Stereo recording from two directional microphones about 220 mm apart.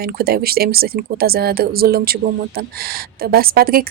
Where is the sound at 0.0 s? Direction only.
45° right (ahead or behind).